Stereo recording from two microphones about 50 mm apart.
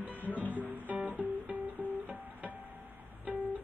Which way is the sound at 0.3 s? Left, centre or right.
Left.